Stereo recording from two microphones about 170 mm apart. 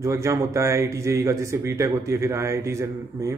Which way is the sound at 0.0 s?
15° right (ahead or behind).